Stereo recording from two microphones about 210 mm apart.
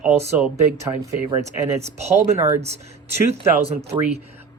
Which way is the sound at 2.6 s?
30° right (ahead or behind).